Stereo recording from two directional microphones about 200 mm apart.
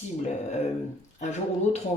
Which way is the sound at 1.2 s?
35° left (ahead or behind).